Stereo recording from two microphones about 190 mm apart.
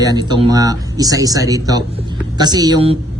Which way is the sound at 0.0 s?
20° right (ahead or behind).